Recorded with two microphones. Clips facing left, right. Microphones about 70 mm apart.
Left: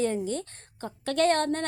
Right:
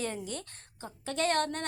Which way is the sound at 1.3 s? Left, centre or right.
Left.